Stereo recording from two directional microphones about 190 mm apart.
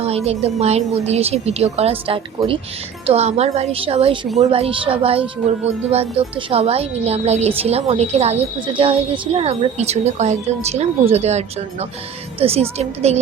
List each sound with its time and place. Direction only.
0.0 s a woman's voice: 30° right (ahead or behind)